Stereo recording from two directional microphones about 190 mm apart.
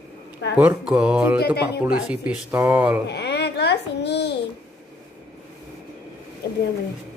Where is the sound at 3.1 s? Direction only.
60° left (ahead or behind).